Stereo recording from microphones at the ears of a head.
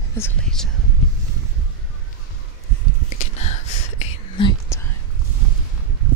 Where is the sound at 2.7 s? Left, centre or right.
Right.